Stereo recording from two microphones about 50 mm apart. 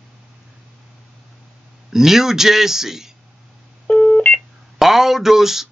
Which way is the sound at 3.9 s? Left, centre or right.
Left.